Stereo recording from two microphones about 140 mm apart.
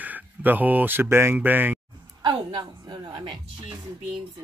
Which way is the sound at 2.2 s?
30° right (ahead or behind).